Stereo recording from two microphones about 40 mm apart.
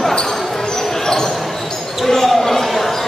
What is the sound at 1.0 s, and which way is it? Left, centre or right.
Basketball bounce, centre.